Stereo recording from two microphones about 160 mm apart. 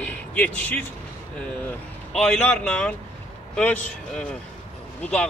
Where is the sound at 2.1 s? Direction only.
5° left (ahead or behind).